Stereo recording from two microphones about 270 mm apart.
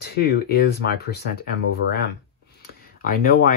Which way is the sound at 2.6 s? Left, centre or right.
Left.